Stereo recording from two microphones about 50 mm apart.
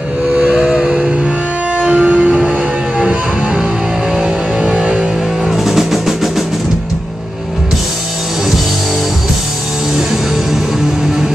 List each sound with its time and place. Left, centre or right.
0.4 s a sound: centre
1.8 s music: right
5.5 s music: centre